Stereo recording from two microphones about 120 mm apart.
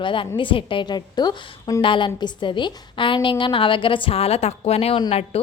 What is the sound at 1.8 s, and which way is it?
A woman's voice, 45° left (ahead or behind).